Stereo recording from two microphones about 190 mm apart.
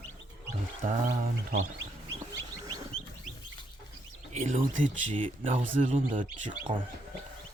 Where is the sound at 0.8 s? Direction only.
40° right (ahead or behind).